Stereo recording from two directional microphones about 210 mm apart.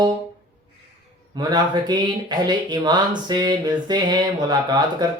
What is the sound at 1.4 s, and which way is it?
Speech, 20° right (ahead or behind).